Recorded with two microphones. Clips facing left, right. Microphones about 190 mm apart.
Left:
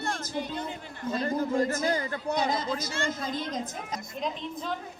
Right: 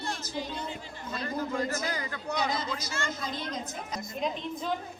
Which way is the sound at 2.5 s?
50° left (ahead or behind).